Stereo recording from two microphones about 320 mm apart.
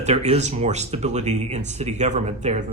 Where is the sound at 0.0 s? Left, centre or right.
Centre.